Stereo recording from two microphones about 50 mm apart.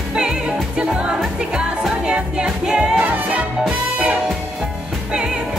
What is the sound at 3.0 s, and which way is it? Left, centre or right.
Music, right.